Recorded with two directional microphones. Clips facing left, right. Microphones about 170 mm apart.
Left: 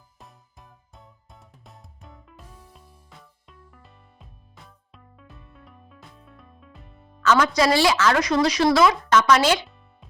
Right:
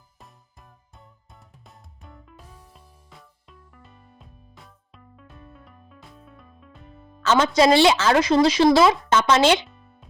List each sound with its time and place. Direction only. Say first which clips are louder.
0.2 s music: left 1 dB; centre (ahead or behind)
7.2 s a woman's voice: right 2 dB; 25° right (ahead or behind)
9.6 s music: right 2 dB; centre (ahead or behind)